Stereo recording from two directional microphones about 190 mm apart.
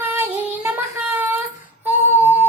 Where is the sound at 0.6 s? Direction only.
10° right (ahead or behind).